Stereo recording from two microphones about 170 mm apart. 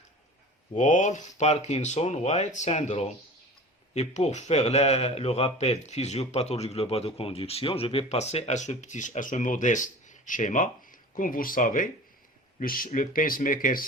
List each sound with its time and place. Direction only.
0.7 s a man's voice: 45° left (ahead or behind)